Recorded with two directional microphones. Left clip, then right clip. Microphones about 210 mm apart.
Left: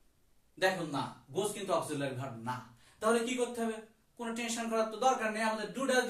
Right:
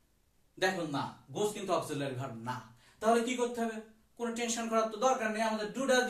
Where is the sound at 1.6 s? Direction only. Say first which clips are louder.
Even; 15° right (ahead or behind).